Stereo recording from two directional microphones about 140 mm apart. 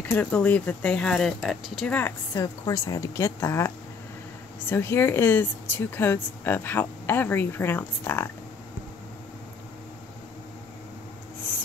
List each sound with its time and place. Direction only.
0.0 s speech: 10° left (ahead or behind)
2.0 s a woman's voice: 20° left (ahead or behind)